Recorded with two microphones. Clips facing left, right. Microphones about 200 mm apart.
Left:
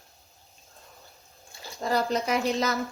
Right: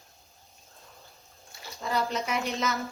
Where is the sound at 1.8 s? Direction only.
35° left (ahead or behind).